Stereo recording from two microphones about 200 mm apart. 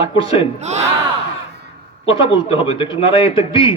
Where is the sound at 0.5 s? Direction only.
35° right (ahead or behind).